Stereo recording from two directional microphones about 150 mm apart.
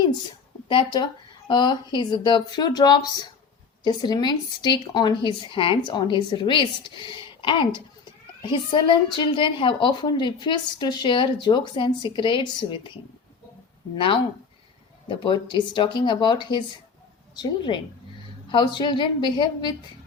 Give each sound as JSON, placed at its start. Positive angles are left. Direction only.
{"t": 0.7, "sound": "a woman's voice", "side_deg": 30}
{"t": 13.9, "sound": "a woman's voice", "side_deg": 35}
{"t": 15.2, "sound": "a woman's voice", "side_deg": 30}